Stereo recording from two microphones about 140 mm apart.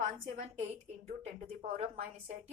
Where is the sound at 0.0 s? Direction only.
65° right (ahead or behind).